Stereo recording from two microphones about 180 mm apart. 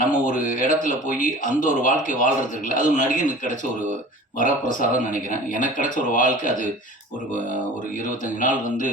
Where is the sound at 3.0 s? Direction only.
40° right (ahead or behind).